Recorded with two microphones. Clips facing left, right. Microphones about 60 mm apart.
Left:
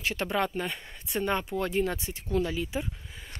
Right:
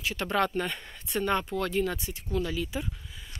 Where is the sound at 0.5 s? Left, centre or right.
Centre; by 2.9 s left.